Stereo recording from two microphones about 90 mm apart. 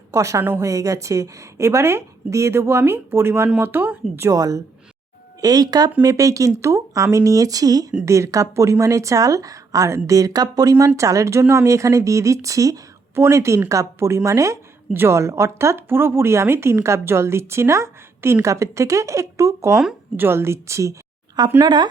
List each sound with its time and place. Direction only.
0.1 s a woman's voice: 35° right (ahead or behind)
4.3 s a woman's voice: 40° right (ahead or behind)
21.6 s speech: 55° right (ahead or behind)